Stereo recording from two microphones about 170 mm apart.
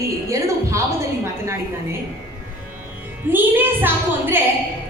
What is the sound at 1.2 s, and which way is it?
Speech, 15° right (ahead or behind).